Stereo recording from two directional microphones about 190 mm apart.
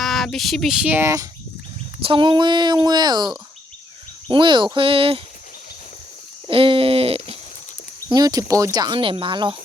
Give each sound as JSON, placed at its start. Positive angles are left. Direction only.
{"t": 0.0, "sound": "speech", "side_deg": 0}
{"t": 2.0, "sound": "speech", "side_deg": -25}
{"t": 6.5, "sound": "speech", "side_deg": -30}
{"t": 8.1, "sound": "speech", "side_deg": -20}